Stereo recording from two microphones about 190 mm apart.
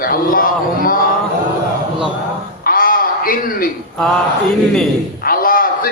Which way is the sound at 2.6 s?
50° left (ahead or behind).